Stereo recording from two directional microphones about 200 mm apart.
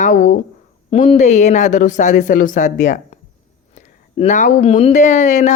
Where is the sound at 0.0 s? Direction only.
40° left (ahead or behind).